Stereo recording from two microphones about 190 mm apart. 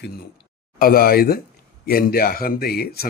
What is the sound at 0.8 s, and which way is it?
A man's voice, 50° left (ahead or behind).